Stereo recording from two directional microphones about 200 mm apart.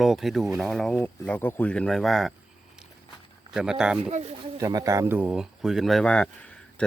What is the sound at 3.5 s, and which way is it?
Speech, 5° right (ahead or behind).